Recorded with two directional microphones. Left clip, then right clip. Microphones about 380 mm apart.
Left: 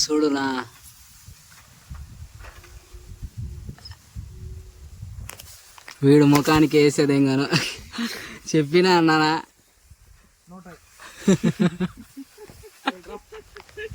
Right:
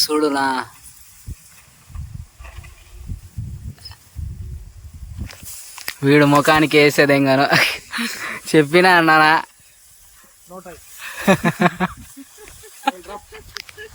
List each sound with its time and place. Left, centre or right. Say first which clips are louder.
0.0 s speech: right 4 dB; centre
6.0 s speech: right 3 dB; centre
11.0 s a sound: right 6 dB; centre